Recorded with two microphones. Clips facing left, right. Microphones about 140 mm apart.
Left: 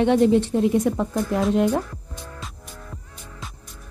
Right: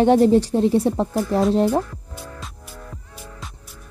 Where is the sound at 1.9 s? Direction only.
Centre (ahead or behind).